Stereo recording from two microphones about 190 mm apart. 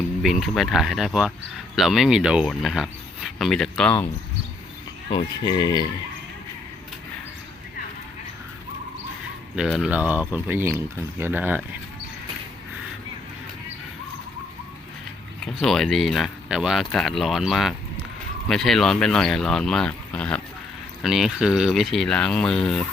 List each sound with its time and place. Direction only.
0.2 s speech: centre (ahead or behind)
5.1 s speech: 20° left (ahead or behind)
9.6 s speech: 5° right (ahead or behind)
15.6 s speech: centre (ahead or behind)